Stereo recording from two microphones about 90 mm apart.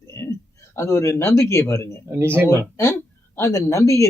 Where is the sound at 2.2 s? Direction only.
25° right (ahead or behind).